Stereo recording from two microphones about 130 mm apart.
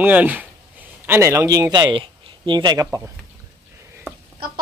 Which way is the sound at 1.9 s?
40° right (ahead or behind).